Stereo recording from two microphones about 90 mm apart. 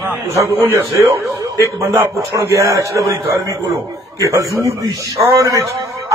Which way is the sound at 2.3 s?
35° right (ahead or behind).